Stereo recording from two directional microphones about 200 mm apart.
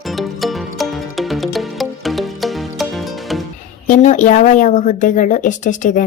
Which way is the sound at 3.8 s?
40° left (ahead or behind).